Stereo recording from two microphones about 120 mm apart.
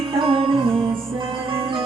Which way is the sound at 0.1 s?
50° right (ahead or behind).